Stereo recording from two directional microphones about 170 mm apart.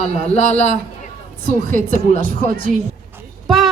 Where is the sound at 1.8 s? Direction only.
55° right (ahead or behind).